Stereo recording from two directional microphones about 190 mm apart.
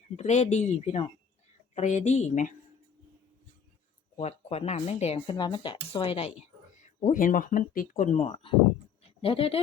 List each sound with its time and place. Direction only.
0.2 s speech: 35° left (ahead or behind)
4.2 s speech: 35° left (ahead or behind)
7.0 s speech: 40° left (ahead or behind)
9.0 s a sound: 30° left (ahead or behind)